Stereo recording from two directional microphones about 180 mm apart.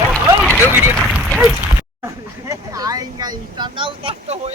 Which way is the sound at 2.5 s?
20° right (ahead or behind).